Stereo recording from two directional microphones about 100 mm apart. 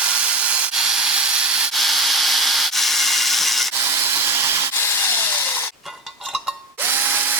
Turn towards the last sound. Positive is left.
turn(degrees=-20)  # may be behind; listen again after turning